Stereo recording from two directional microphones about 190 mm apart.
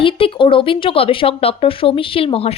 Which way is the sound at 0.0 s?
30° left (ahead or behind).